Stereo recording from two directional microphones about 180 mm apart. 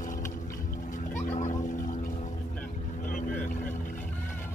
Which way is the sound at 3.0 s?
50° left (ahead or behind).